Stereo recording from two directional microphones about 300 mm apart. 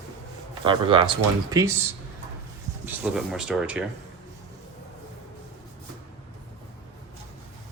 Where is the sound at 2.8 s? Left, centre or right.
Centre.